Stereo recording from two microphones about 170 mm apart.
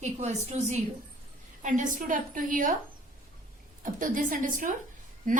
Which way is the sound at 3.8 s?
50° right (ahead or behind).